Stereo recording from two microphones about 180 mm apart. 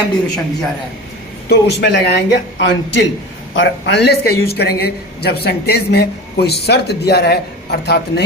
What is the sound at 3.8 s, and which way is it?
A woman's voice, 70° left (ahead or behind).